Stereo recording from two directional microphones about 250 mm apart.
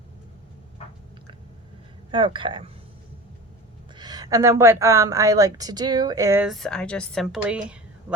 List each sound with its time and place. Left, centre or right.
2.0 s speech: centre
3.9 s speech: centre